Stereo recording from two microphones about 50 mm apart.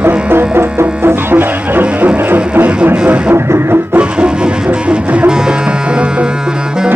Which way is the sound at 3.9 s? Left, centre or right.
Centre.